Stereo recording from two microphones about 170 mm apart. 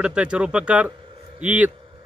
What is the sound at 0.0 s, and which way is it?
Speech, 5° right (ahead or behind).